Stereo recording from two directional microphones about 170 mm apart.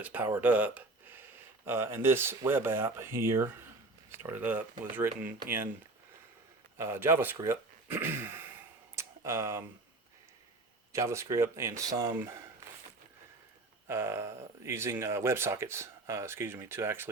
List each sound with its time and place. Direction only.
0.0 s speech: 10° right (ahead or behind)
6.7 s a sound: 15° right (ahead or behind)
10.9 s speech: 15° right (ahead or behind)
13.8 s speech: 15° right (ahead or behind)